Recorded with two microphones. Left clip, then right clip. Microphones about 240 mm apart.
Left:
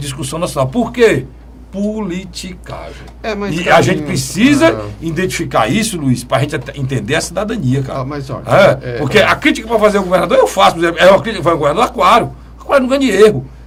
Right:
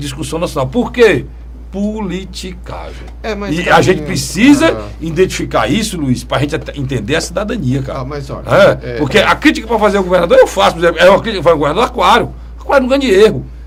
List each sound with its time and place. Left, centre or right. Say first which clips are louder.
0.0 s a man's voice: right 1 dB; right
3.2 s a man's voice: left 1 dB; centre
3.5 s a man's voice: right 1 dB; right
7.9 s a man's voice: left 1 dB; centre
8.4 s a man's voice: right 1 dB; right
8.8 s a man's voice: right 2 dB; centre
9.0 s a man's voice: right 1 dB; right